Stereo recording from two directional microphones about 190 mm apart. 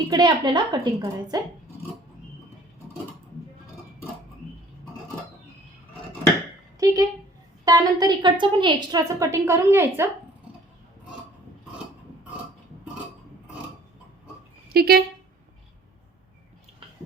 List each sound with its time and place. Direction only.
0.1 s a woman's voice: 25° right (ahead or behind)
6.7 s a sound: 15° right (ahead or behind)
7.6 s a woman's voice: 20° right (ahead or behind)
14.7 s speech: 55° right (ahead or behind)